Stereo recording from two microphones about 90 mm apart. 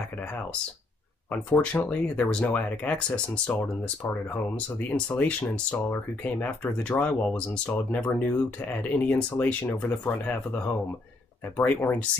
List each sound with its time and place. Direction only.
1.3 s speech: 20° left (ahead or behind)
4.8 s speech: 20° left (ahead or behind)